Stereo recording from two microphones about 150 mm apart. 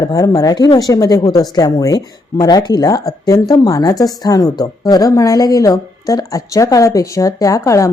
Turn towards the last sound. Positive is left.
turn(degrees=20)  # may be behind; listen again after turning